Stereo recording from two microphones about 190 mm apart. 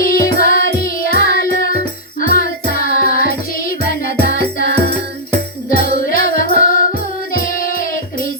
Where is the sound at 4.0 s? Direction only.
65° right (ahead or behind).